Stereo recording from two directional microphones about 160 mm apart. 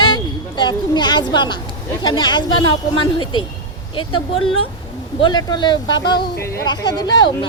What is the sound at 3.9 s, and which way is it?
A woman's voice, 30° left (ahead or behind).